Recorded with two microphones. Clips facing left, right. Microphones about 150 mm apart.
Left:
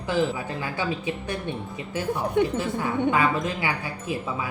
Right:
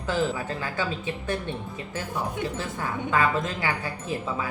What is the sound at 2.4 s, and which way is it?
Speech, 60° left (ahead or behind).